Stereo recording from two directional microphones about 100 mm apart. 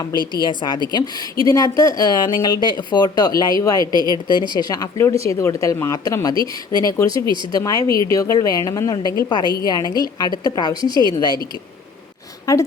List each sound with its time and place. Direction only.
0.2 s a woman's voice: 45° right (ahead or behind)
0.4 s a woman's voice: 50° left (ahead or behind)
3.9 s a woman's voice: 40° right (ahead or behind)
4.3 s a woman's voice: 50° left (ahead or behind)
12.5 s a woman's voice: 35° left (ahead or behind)